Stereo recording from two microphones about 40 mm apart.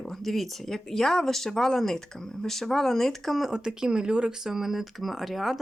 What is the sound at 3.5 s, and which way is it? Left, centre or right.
Speech, centre.